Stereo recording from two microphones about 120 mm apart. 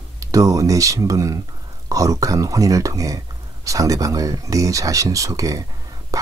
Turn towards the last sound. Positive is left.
turn(degrees=-30)  # may be behind; listen again after turning